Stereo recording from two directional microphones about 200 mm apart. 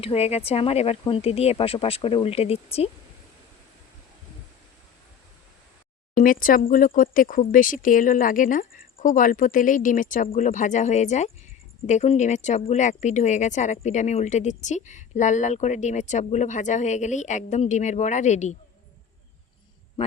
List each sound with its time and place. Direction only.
0.0 s speech: 30° left (ahead or behind)
6.1 s speech: 45° left (ahead or behind)